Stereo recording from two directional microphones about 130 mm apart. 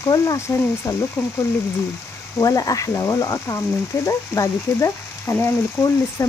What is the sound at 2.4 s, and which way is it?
Speech, 25° left (ahead or behind).